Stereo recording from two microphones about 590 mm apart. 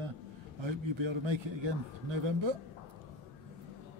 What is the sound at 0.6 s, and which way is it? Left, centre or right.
Speech, right.